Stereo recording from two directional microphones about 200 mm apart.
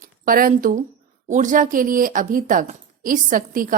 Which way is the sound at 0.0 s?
45° right (ahead or behind).